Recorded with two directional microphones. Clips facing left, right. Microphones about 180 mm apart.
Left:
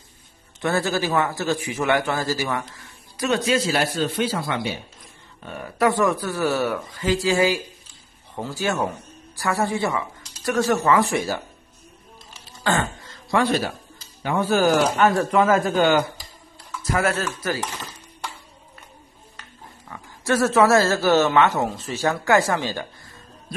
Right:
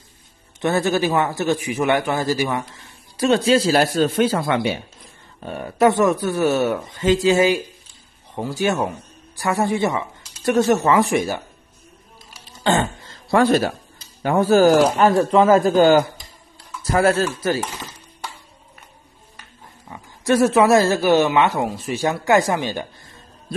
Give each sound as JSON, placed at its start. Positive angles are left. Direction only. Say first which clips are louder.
{"t": 0.6, "sound": "speech", "louder": "right 4 dB", "side_deg": -20}
{"t": 3.2, "sound": "speech", "louder": "right 5 dB", "side_deg": -30}
{"t": 5.4, "sound": "speech", "louder": "right 5 dB", "side_deg": -30}
{"t": 12.6, "sound": "a sound", "louder": "right 4 dB", "side_deg": -25}
{"t": 13.4, "sound": "speech", "louder": "right 5 dB", "side_deg": -45}
{"t": 19.9, "sound": "speech", "louder": "right 4 dB", "side_deg": -15}